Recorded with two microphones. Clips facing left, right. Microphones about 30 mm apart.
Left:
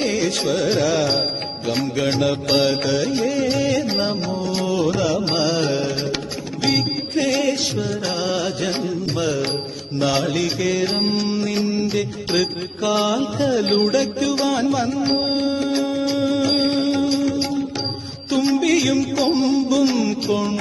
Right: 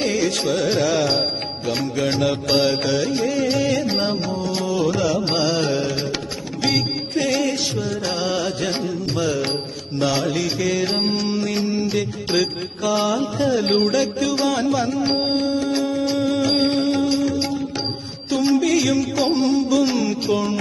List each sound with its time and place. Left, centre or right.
0.0 s music: centre
10.0 s music: centre
15.7 s music: centre